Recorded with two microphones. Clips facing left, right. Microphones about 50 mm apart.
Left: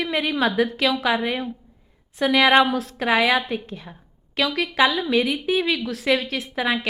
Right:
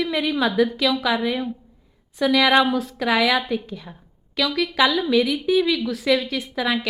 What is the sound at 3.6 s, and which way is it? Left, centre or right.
Speech, left.